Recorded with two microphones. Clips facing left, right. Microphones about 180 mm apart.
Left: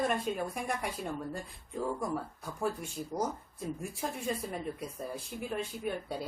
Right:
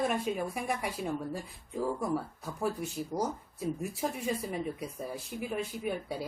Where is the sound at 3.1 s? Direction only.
20° right (ahead or behind).